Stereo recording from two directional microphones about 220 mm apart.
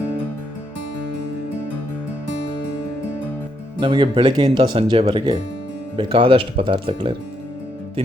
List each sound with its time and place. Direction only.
3.8 s speech: 20° right (ahead or behind)